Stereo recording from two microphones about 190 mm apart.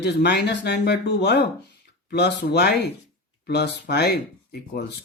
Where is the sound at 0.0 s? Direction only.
60° left (ahead or behind).